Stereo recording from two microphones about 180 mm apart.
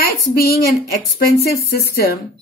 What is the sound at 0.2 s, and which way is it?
A woman's voice, 60° left (ahead or behind).